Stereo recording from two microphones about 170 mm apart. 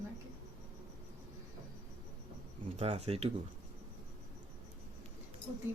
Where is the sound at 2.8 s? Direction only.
35° right (ahead or behind).